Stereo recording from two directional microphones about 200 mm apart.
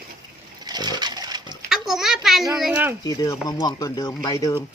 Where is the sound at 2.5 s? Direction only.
5° right (ahead or behind).